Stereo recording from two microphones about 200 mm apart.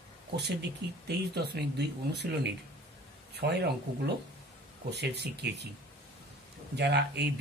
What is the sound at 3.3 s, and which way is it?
Speech, 55° right (ahead or behind).